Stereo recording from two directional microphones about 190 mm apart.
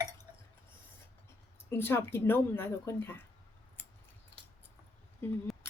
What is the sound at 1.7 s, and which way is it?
A woman's voice, 10° left (ahead or behind).